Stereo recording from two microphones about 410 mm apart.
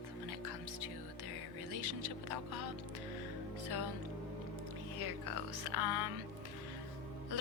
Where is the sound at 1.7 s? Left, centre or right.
Right.